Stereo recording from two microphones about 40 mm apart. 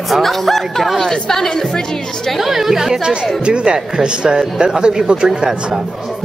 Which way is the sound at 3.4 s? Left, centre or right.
Right.